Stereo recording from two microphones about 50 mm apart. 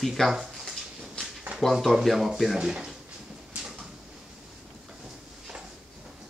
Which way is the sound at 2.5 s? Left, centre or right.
Centre.